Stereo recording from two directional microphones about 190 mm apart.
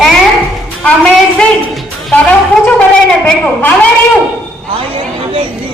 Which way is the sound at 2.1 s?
5° left (ahead or behind).